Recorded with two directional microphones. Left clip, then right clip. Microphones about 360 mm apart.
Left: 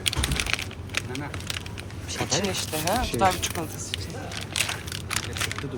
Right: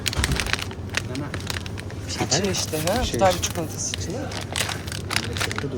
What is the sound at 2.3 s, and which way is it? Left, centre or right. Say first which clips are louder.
Speech: right 3 dB; centre.